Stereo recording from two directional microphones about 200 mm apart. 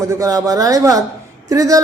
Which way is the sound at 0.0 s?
15° right (ahead or behind).